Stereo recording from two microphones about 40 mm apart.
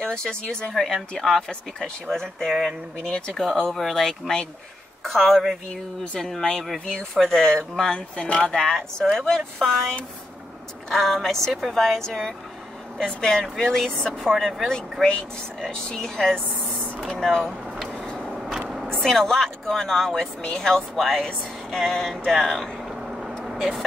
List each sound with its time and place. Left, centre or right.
0.0 s speech: centre
0.7 s speech: centre
3.8 s a woman's voice: centre
8.2 s speech: left
8.5 s speech: centre
10.9 s speech: centre
18.9 s speech: centre
21.6 s a sound: centre